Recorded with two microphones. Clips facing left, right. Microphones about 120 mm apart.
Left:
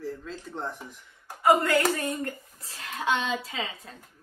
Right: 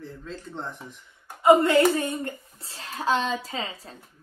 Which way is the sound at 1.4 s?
25° right (ahead or behind).